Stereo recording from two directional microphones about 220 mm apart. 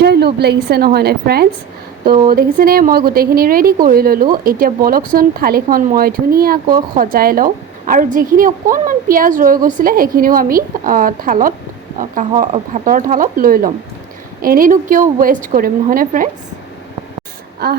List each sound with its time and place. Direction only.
0.0 s a woman's voice: 50° right (ahead or behind)
17.6 s a woman's voice: 50° right (ahead or behind)